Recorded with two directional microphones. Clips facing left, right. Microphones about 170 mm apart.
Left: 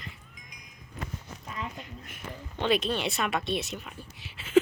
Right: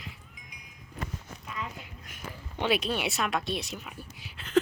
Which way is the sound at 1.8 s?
Centre (ahead or behind).